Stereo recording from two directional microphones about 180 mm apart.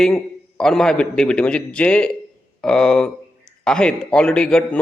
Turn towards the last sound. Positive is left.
turn(degrees=5)  # may be behind; listen again after turning